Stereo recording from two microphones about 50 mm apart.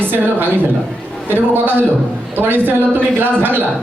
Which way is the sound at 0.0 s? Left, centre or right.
Right.